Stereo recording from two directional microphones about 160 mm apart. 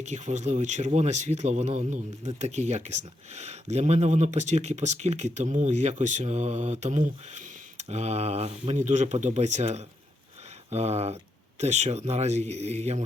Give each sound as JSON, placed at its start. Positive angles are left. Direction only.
{"t": 0.0, "sound": "speech", "side_deg": -45}